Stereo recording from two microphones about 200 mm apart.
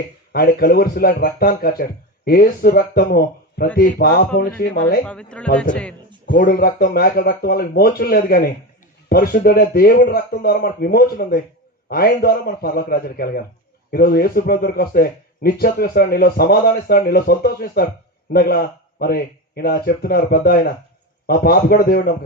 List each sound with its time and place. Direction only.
0.3 s speech: 50° left (ahead or behind)
5.0 s speech: 5° left (ahead or behind)
6.2 s speech: 45° left (ahead or behind)